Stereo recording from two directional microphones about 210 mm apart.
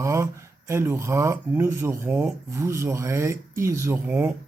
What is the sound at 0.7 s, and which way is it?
Speech, 10° right (ahead or behind).